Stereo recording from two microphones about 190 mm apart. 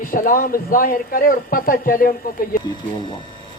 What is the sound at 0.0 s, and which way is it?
Speech, 45° left (ahead or behind).